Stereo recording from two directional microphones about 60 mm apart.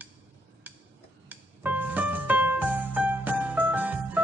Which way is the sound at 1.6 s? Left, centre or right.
Right.